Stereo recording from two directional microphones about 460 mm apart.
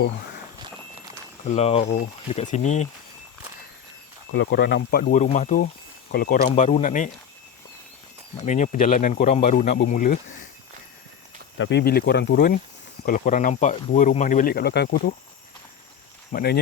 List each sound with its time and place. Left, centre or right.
1.5 s speech: centre
4.3 s speech: left
8.4 s speech: centre
11.5 s speech: left
16.3 s speech: centre